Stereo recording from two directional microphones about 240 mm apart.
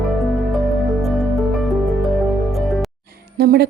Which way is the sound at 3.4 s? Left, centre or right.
Right.